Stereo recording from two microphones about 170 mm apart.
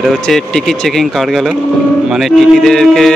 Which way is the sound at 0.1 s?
Centre (ahead or behind).